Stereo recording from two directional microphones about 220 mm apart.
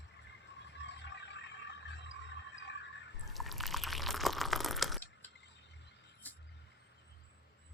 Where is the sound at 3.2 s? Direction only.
Centre (ahead or behind).